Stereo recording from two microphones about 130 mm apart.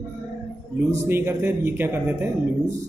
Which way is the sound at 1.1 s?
20° right (ahead or behind).